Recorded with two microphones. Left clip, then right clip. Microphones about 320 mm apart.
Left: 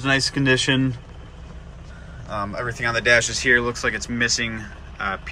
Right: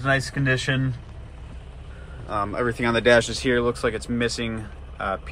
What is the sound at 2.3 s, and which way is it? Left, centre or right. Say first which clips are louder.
Speech: right 2 dB; centre.